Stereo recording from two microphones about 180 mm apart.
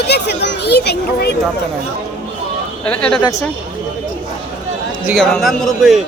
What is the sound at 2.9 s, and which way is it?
Speech, 5° left (ahead or behind).